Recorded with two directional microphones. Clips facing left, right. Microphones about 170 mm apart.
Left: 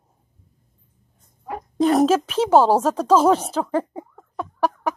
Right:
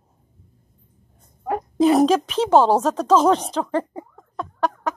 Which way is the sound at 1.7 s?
5° right (ahead or behind).